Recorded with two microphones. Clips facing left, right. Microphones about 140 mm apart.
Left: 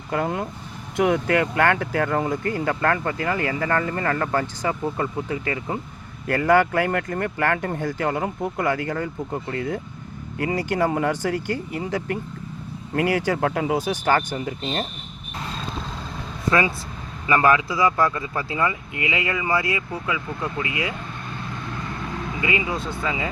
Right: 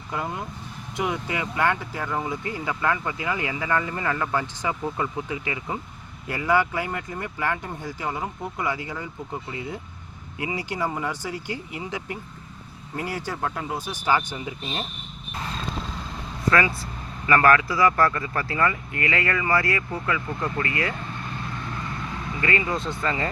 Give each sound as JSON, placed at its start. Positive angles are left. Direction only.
{"t": 0.1, "sound": "speech", "side_deg": 65}
{"t": 6.2, "sound": "speech", "side_deg": 55}
{"t": 11.4, "sound": "speech", "side_deg": 45}
{"t": 13.0, "sound": "speech", "side_deg": 80}
{"t": 14.1, "sound": "speech", "side_deg": 50}
{"t": 16.5, "sound": "speech", "side_deg": 20}
{"t": 22.4, "sound": "speech", "side_deg": 15}